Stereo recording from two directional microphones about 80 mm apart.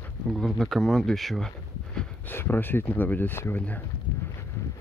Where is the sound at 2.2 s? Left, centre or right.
Left.